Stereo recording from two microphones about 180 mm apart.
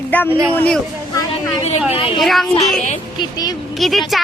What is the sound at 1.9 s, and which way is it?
Speech, 30° left (ahead or behind).